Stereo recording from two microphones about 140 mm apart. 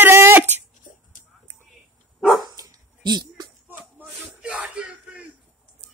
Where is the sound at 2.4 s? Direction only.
30° right (ahead or behind).